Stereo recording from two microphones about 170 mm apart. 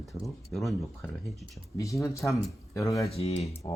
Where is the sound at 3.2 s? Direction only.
35° left (ahead or behind).